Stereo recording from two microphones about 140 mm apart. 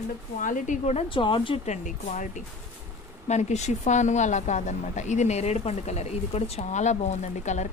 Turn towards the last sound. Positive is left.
turn(degrees=55)  # may be behind; listen again after turning